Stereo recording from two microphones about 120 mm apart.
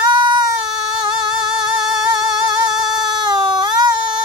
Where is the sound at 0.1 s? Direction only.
40° right (ahead or behind).